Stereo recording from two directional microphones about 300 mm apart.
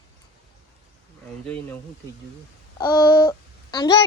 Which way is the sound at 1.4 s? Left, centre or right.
Centre.